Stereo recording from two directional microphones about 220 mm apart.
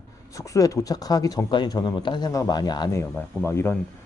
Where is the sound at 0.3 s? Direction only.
15° left (ahead or behind).